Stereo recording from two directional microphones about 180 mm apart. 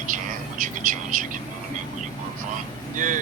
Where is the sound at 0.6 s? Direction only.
45° right (ahead or behind).